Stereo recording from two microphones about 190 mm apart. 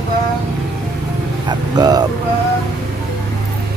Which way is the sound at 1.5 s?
20° right (ahead or behind).